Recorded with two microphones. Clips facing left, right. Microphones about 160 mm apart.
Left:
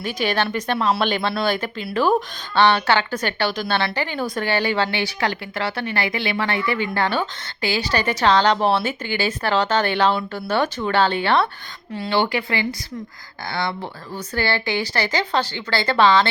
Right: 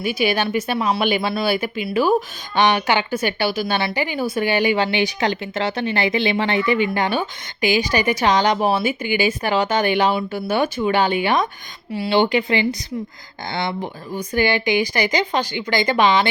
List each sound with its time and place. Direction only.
0.0 s speech: 10° right (ahead or behind)